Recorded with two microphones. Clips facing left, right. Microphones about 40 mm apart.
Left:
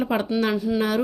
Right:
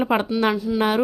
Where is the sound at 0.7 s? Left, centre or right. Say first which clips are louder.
Right 3 dB; right.